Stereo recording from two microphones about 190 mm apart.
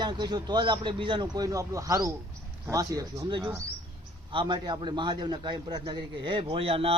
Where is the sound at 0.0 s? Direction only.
20° right (ahead or behind).